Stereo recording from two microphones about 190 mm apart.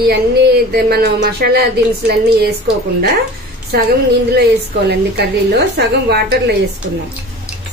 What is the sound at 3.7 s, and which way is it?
A woman's voice, 50° right (ahead or behind).